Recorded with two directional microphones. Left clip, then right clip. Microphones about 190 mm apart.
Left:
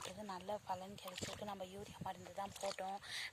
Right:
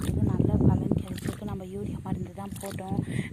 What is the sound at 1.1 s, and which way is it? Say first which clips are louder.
Boat: right 11 dB; 40° right (ahead or behind).